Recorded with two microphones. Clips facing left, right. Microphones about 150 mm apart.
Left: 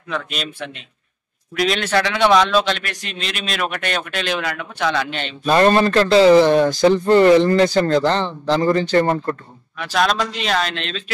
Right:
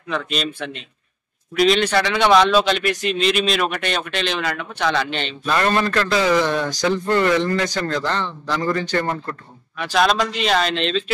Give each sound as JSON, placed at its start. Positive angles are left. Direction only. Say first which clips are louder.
{"t": 0.1, "sound": "a man's voice", "louder": "right 2 dB", "side_deg": 5}
{"t": 5.5, "sound": "speech", "louder": "left 6 dB", "side_deg": 30}
{"t": 9.8, "sound": "a man's voice", "louder": "right 1 dB", "side_deg": 0}